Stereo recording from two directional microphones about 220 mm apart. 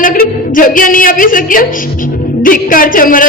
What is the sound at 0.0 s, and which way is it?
A woman's voice, 40° left (ahead or behind).